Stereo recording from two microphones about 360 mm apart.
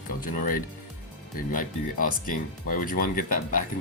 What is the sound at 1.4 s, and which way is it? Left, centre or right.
Speech, left.